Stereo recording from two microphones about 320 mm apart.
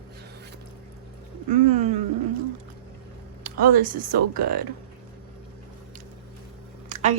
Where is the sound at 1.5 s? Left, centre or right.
Right.